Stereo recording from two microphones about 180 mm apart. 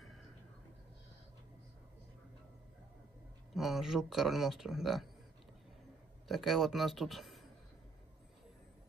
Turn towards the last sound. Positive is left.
turn(degrees=0)  # may be behind; listen again after turning